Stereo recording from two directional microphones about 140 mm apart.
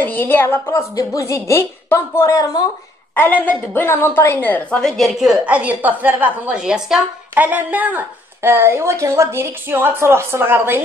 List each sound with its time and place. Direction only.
0.0 s speech: 15° left (ahead or behind)
3.2 s a woman's voice: 10° left (ahead or behind); by 10.8 s 15° right (ahead or behind)